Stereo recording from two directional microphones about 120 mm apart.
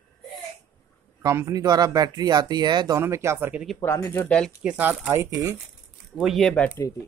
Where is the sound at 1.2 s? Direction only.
25° right (ahead or behind).